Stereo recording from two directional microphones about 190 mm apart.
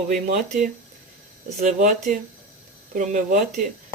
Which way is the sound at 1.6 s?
40° right (ahead or behind).